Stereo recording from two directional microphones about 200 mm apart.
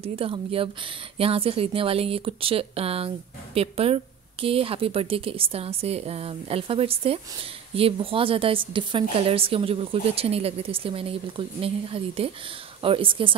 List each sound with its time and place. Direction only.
0.0 s speech: 25° right (ahead or behind)